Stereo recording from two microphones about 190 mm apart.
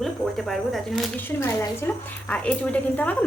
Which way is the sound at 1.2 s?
15° left (ahead or behind).